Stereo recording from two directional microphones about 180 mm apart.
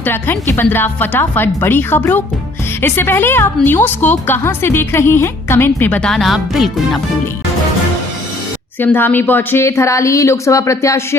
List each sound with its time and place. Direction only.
0.0 s a woman's voice: 10° left (ahead or behind)
8.8 s a woman's voice: 10° left (ahead or behind)